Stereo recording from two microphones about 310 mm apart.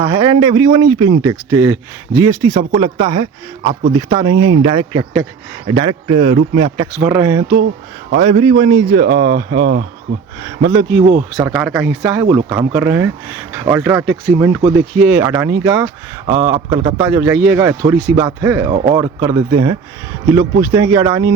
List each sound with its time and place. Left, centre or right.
0.0 s speech: centre
6.7 s speech: centre
9.0 s speech: right
10.7 s speech: centre
11.0 s speech: right
11.4 s speech: centre
17.1 s speech: centre